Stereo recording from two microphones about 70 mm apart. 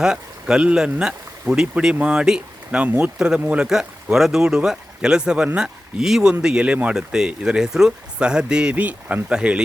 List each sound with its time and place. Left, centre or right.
0.0 s speech: centre
2.8 s speech: right
3.2 s speech: centre
3.7 s speech: centre